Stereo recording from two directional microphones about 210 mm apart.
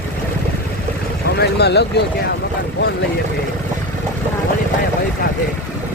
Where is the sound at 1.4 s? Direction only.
50° left (ahead or behind).